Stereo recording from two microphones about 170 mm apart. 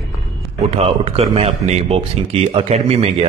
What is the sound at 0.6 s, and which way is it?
A man's voice, 35° right (ahead or behind).